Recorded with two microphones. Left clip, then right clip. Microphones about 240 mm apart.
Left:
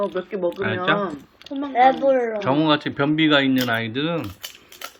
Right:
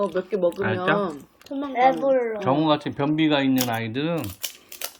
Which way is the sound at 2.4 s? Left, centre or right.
Centre.